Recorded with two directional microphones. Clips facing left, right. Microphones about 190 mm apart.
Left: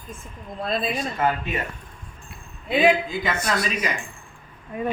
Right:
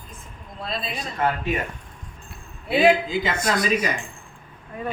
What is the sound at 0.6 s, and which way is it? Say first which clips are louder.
Speech: left 5 dB; 50° left (ahead or behind).